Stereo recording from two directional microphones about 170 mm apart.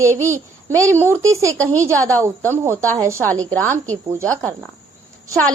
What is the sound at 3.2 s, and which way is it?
Speech, 10° left (ahead or behind).